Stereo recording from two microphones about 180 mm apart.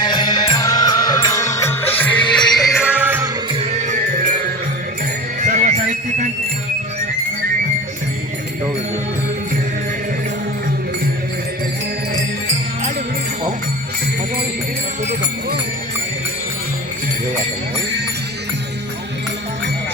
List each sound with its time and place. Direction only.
0.0 s music: 25° left (ahead or behind); by 3.2 s 10° right (ahead or behind)
3.5 s music: 35° right (ahead or behind)
5.4 s jingle bell: 45° right (ahead or behind)